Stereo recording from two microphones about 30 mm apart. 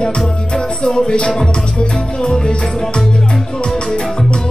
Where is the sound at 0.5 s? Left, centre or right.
Left.